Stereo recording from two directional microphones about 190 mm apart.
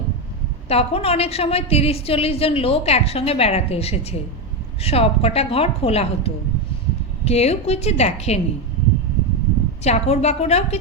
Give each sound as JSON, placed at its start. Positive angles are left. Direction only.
{"t": 0.7, "sound": "a woman's voice", "side_deg": 30}
{"t": 9.8, "sound": "a woman's voice", "side_deg": 35}